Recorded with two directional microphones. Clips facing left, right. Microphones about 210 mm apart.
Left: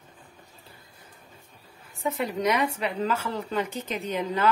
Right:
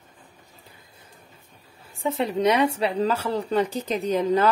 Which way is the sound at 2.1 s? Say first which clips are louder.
Right 4 dB; 30° right (ahead or behind).